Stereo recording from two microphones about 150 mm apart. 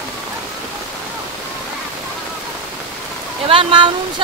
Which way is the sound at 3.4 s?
35° right (ahead or behind).